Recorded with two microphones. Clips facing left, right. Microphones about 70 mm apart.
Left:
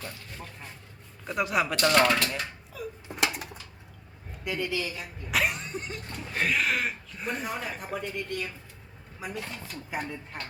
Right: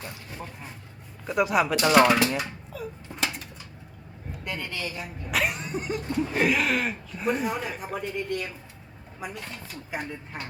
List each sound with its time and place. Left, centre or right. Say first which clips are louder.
0.0 s speech: right 3 dB; centre
1.3 s speech: right 4 dB; centre
2.7 s a sound: right 2 dB; centre
3.2 s dishes: left 2 dB; left
4.4 s speech: left 3 dB; centre
4.9 s a sound: right 1 dB; centre
6.3 s speech: right 2 dB; centre